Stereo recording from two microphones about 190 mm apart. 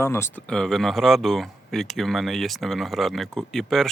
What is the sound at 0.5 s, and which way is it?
Speech, 5° left (ahead or behind).